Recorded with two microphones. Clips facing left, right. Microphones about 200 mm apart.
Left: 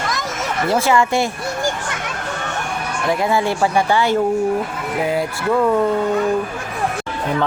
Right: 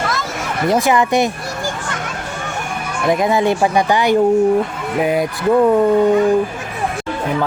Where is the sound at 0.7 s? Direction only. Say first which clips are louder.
Right 2 dB; 15° right (ahead or behind).